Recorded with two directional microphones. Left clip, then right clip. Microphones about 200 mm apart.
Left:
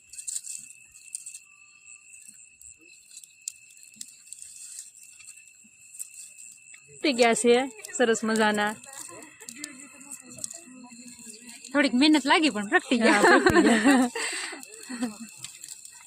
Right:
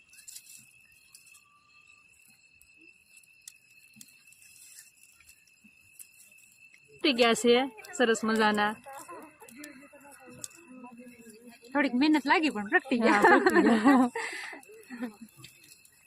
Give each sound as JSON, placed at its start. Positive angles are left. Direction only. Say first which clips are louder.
{"t": 7.0, "sound": "speech", "louder": "left 3 dB", "side_deg": 15}
{"t": 11.7, "sound": "speech", "louder": "left 4 dB", "side_deg": 50}
{"t": 13.7, "sound": "speech", "louder": "left 2 dB", "side_deg": 15}
{"t": 14.1, "sound": "a sound", "louder": "left 4 dB", "side_deg": 50}